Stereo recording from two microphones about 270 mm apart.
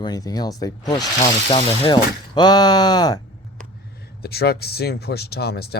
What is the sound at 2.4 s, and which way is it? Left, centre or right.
Speech, centre.